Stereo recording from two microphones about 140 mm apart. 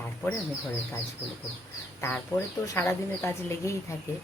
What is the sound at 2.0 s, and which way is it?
A woman's voice, 20° left (ahead or behind).